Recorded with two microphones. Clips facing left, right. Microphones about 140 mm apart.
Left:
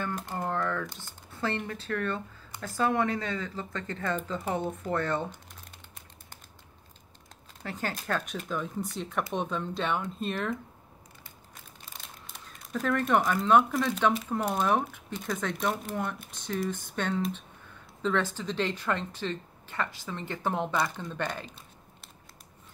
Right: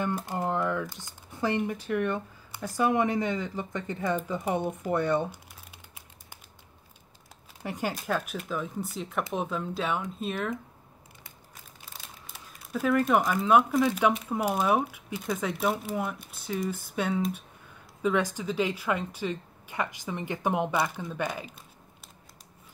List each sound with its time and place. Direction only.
0.0 s speech: 15° right (ahead or behind)
7.6 s speech: 15° right (ahead or behind)
11.5 s speech: 5° right (ahead or behind)